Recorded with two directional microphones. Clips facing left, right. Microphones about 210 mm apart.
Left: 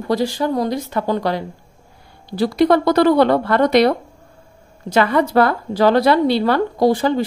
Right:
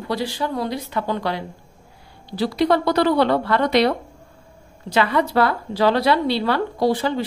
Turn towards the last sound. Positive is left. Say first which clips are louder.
# left 4 dB
turn(degrees=45)  # may be behind; listen again after turning